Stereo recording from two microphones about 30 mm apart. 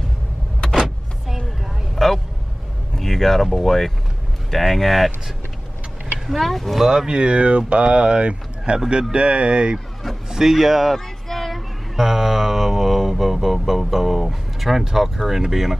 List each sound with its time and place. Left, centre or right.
0.6 s vehicle: left
2.0 s vehicle: centre
3.0 s a sound: centre
3.5 s speech: centre
6.1 s a sound: centre
6.4 s speech: centre
6.9 s speech: right
7.2 s speech: right
10.3 s speech: centre
10.9 s music: centre
12.0 s mantra: centre
15.1 s speech: centre